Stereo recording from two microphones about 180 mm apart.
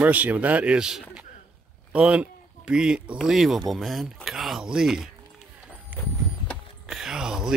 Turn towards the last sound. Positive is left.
turn(degrees=-5)  # may be behind; listen again after turning